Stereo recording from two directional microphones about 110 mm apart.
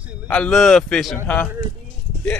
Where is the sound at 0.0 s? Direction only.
10° right (ahead or behind).